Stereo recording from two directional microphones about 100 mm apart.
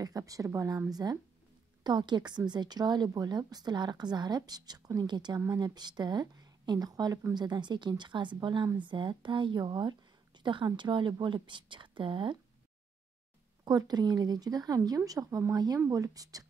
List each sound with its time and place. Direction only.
0.0 s a woman's voice: 35° right (ahead or behind)
1.8 s a woman's voice: 45° right (ahead or behind)
13.7 s a woman's voice: 40° right (ahead or behind)